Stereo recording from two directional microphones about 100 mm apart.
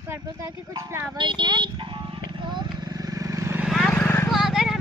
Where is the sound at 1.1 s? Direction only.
50° right (ahead or behind); by 3.6 s 30° right (ahead or behind).